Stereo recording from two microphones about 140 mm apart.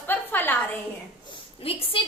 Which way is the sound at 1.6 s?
40° left (ahead or behind).